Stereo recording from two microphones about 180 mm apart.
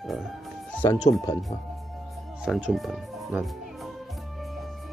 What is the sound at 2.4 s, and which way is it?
Speech, 5° right (ahead or behind).